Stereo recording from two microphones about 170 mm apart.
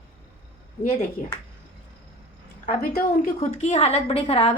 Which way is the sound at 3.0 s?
45° left (ahead or behind).